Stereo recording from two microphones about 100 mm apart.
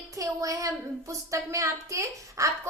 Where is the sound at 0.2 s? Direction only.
35° right (ahead or behind).